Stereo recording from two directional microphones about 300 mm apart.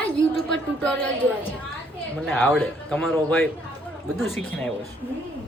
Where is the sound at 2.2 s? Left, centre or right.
Centre.